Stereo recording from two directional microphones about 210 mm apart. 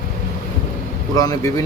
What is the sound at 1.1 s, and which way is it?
Speech, 15° left (ahead or behind).